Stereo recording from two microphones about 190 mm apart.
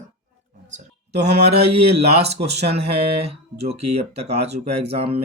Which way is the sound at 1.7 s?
35° right (ahead or behind).